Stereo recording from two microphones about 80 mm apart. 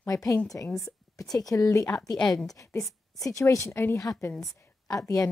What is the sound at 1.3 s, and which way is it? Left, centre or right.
A woman's voice, left.